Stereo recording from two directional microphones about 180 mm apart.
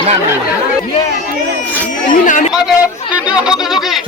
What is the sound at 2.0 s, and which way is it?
Speech, 45° left (ahead or behind).